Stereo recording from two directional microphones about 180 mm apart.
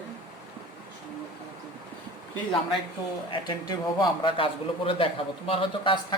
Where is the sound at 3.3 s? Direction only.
25° left (ahead or behind).